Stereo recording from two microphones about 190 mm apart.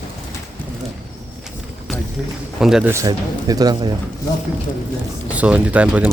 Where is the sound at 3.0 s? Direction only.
20° right (ahead or behind).